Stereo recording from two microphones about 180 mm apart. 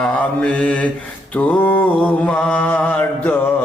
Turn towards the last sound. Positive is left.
turn(degrees=10)  # may be behind; listen again after turning